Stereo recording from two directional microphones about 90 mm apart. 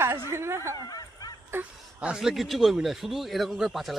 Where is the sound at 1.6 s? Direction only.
10° right (ahead or behind).